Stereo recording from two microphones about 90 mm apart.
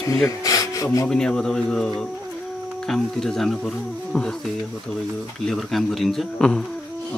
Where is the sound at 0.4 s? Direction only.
40° left (ahead or behind).